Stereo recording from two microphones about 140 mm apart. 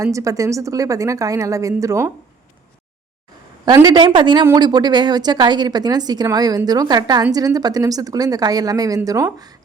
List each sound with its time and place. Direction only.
0.0 s speech: 25° right (ahead or behind)
3.8 s speech: 35° right (ahead or behind)